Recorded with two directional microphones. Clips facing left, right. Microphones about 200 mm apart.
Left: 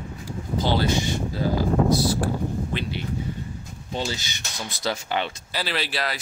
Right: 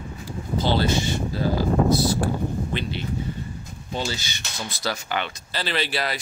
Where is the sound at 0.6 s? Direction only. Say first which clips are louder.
Right 1 dB; 15° left (ahead or behind).